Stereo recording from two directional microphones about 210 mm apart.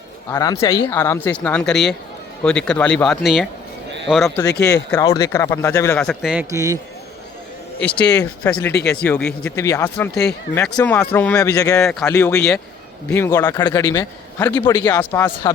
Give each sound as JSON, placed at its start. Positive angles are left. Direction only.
{"t": 0.3, "sound": "speech", "side_deg": 15}
{"t": 4.4, "sound": "speech", "side_deg": 50}
{"t": 4.9, "sound": "speech", "side_deg": 15}
{"t": 6.5, "sound": "a man's voice", "side_deg": -15}
{"t": 8.7, "sound": "speech", "side_deg": 50}
{"t": 9.0, "sound": "speech", "side_deg": 5}